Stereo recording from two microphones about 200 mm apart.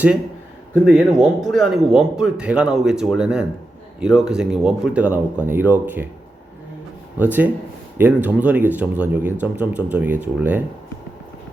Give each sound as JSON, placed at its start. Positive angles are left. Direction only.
{"t": 0.9, "sound": "a man's voice", "side_deg": 0}
{"t": 7.2, "sound": "speech", "side_deg": -10}